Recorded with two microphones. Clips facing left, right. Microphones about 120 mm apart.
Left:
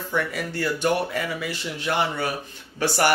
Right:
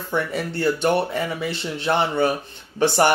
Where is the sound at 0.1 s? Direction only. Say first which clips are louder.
Right 3 dB; 30° right (ahead or behind).